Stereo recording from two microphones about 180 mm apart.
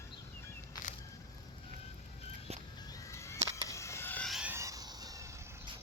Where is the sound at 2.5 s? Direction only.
35° right (ahead or behind).